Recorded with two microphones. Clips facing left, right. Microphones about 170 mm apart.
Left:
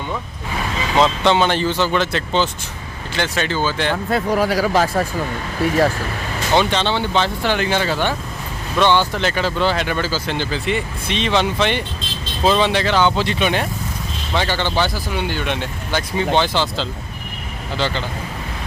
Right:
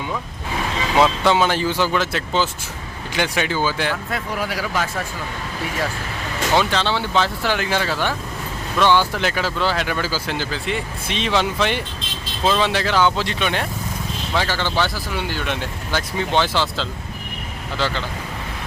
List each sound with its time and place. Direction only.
0.9 s speech: 5° right (ahead or behind)
4.1 s speech: 40° left (ahead or behind)
6.6 s speech: centre (ahead or behind)